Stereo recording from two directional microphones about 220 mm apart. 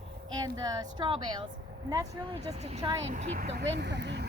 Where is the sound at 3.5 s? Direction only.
50° right (ahead or behind).